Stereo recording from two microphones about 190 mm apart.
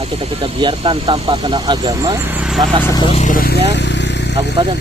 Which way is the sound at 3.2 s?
45° left (ahead or behind).